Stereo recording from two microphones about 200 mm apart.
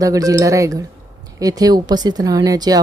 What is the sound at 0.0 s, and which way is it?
Speech, 15° right (ahead or behind).